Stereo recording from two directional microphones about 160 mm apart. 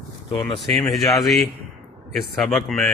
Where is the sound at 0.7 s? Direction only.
Centre (ahead or behind).